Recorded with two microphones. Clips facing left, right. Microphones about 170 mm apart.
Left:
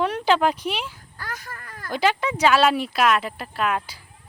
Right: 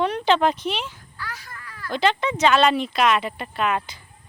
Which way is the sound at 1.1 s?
45° left (ahead or behind).